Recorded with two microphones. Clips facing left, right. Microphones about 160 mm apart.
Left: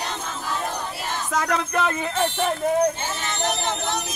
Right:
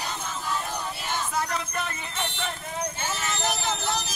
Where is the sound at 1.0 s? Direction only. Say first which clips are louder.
Left 4 dB; 85° left.